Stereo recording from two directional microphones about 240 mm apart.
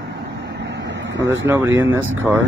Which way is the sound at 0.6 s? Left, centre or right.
Right.